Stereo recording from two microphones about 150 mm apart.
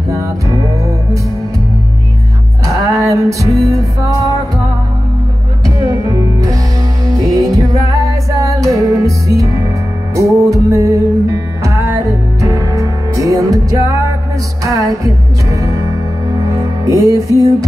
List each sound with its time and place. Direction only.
0.1 s music: 20° right (ahead or behind)
2.6 s music: 20° right (ahead or behind)
5.8 s music: 20° right (ahead or behind)
16.8 s music: 25° right (ahead or behind)